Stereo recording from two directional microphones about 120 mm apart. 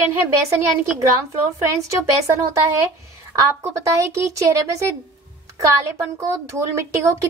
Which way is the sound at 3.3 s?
25° right (ahead or behind).